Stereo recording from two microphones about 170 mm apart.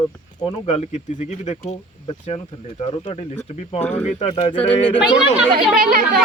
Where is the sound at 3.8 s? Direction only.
10° left (ahead or behind).